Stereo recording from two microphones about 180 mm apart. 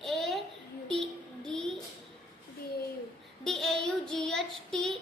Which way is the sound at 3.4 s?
Centre (ahead or behind).